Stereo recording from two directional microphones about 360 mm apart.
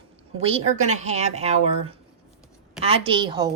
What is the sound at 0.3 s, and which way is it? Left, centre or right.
A woman's voice, centre.